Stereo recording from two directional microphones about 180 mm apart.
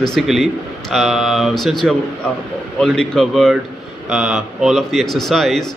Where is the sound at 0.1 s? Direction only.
Centre (ahead or behind).